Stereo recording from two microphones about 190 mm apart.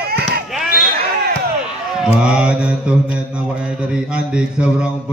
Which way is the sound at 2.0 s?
5° right (ahead or behind).